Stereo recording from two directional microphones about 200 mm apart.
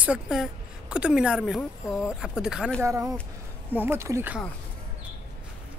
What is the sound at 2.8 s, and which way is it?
Speech, 15° right (ahead or behind).